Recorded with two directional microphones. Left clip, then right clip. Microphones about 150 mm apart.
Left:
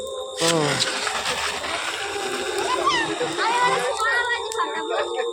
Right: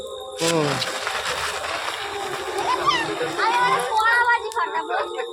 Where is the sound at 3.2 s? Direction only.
15° right (ahead or behind).